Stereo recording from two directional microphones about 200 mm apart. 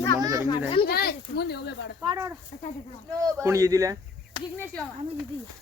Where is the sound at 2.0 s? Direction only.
15° right (ahead or behind).